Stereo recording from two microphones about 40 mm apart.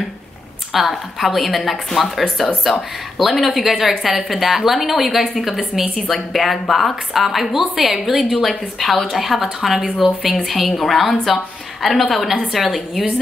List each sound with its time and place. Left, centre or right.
0.7 s a woman's voice: centre